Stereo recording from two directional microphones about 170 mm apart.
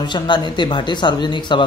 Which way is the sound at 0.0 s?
25° left (ahead or behind).